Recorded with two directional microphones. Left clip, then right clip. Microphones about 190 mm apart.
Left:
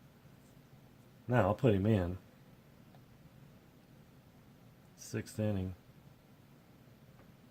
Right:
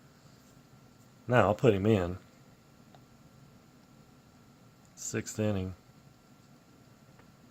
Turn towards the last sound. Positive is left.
turn(degrees=-25)  # may be behind; listen again after turning